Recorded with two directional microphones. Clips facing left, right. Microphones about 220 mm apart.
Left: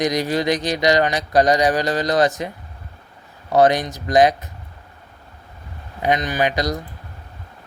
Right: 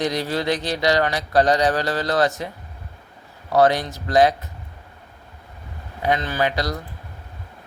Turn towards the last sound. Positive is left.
turn(degrees=15)  # may be behind; listen again after turning